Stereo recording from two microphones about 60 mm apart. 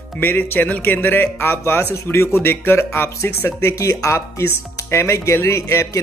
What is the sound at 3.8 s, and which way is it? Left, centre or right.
Speech, left.